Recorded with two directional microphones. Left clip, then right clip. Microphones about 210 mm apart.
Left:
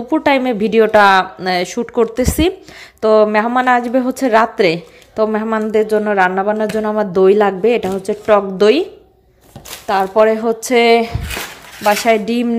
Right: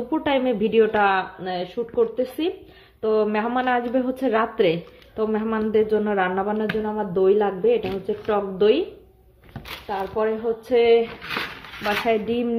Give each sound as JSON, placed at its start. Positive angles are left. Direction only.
{"t": 0.1, "sound": "a woman's voice", "side_deg": 20}
{"t": 3.3, "sound": "a woman's voice", "side_deg": 20}
{"t": 6.8, "sound": "a woman's voice", "side_deg": 30}
{"t": 9.8, "sound": "a woman's voice", "side_deg": 35}